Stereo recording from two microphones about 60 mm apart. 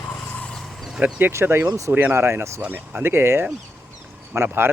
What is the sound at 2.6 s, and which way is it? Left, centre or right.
Speech, right.